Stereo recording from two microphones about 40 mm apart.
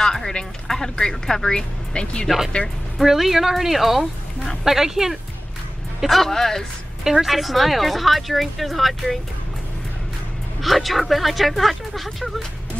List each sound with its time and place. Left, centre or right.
0.0 s speech: centre
3.0 s speech: centre
6.0 s speech: centre
7.2 s speech: centre
10.6 s speech: centre